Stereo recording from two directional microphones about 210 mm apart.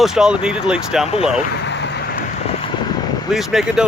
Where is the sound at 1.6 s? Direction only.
55° left (ahead or behind).